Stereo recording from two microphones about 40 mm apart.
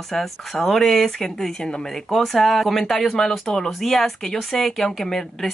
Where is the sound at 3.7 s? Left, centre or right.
Centre.